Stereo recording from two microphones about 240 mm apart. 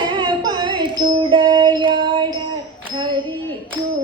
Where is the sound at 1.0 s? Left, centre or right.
Right.